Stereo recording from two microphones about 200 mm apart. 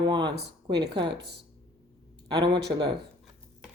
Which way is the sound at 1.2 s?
55° right (ahead or behind).